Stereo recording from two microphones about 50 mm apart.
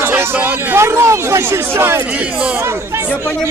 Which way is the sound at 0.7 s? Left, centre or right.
Right.